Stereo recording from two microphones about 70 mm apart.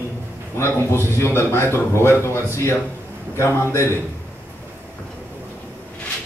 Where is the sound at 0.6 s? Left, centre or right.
Left.